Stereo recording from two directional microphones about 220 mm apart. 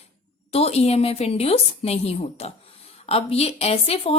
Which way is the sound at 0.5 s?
25° left (ahead or behind).